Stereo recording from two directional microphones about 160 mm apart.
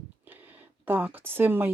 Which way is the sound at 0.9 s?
10° right (ahead or behind).